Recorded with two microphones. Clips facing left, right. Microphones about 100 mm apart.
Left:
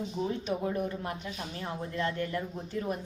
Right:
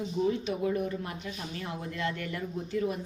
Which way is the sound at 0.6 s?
45° left (ahead or behind).